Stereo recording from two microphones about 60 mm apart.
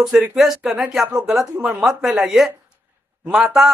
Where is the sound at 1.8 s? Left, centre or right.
Centre.